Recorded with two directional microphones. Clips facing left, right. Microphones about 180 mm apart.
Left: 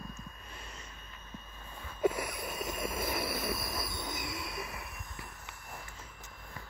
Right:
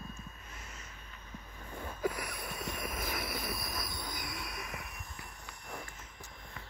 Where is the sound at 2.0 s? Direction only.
25° left (ahead or behind).